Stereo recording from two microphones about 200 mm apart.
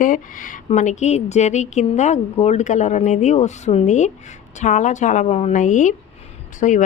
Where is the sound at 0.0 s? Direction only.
40° left (ahead or behind).